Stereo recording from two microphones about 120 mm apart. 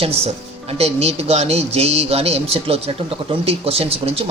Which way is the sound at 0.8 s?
60° right (ahead or behind).